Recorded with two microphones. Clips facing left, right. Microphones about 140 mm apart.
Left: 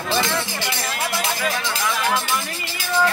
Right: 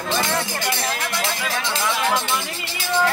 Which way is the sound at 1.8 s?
25° right (ahead or behind).